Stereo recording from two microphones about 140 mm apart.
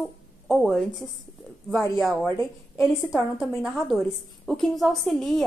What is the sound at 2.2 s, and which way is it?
Speech, 15° left (ahead or behind).